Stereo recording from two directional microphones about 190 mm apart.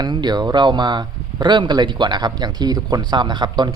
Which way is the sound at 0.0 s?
20° right (ahead or behind).